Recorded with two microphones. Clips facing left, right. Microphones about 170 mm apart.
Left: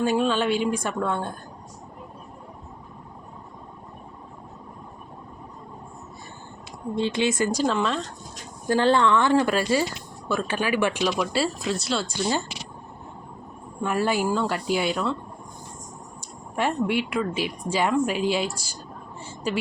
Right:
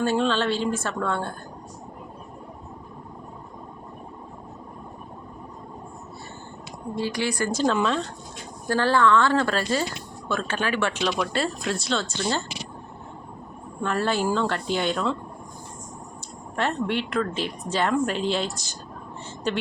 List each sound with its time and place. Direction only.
0.0 s speech: 10° left (ahead or behind)
6.9 s speech: 20° left (ahead or behind)
7.6 s speech: centre (ahead or behind)
8.6 s speech: 20° left (ahead or behind)
13.8 s speech: 10° left (ahead or behind)
16.6 s speech: 10° left (ahead or behind)